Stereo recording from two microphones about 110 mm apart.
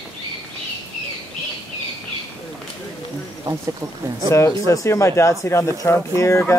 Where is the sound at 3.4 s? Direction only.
30° right (ahead or behind).